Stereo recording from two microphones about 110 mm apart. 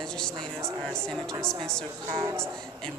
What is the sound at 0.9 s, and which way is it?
Speech, 5° left (ahead or behind).